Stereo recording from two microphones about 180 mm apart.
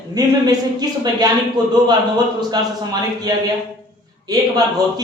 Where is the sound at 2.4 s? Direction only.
20° right (ahead or behind).